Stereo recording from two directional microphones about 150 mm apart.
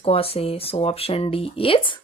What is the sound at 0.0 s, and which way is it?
Speech, 40° left (ahead or behind).